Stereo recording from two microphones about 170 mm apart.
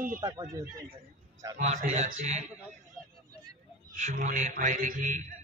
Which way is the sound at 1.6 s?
45° right (ahead or behind).